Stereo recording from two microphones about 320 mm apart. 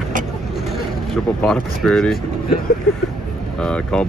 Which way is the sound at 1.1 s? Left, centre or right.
Centre.